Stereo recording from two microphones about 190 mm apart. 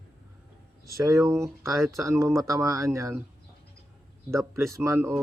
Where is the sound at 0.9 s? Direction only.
15° right (ahead or behind).